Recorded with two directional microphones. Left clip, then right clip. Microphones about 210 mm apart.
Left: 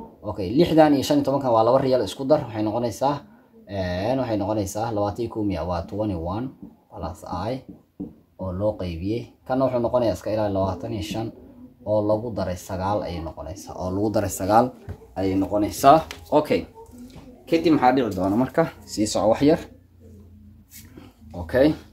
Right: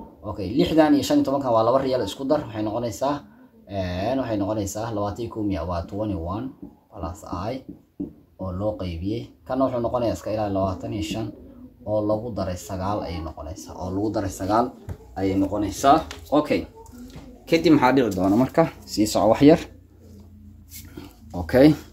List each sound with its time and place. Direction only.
0.2 s speech: 45° left (ahead or behind)
16.3 s speech: 25° left (ahead or behind)
17.5 s speech: 25° right (ahead or behind)
20.9 s a sound: 50° right (ahead or behind)